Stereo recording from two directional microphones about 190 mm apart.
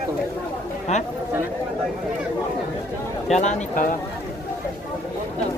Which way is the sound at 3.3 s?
40° left (ahead or behind).